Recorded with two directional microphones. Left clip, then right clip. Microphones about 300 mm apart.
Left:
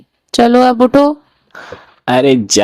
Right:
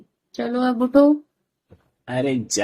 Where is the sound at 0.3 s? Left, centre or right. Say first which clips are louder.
Left 14 dB; left.